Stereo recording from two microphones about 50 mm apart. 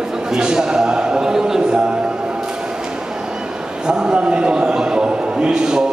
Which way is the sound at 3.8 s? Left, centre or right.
Centre.